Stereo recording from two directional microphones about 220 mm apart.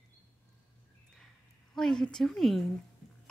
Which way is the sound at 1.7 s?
Centre (ahead or behind).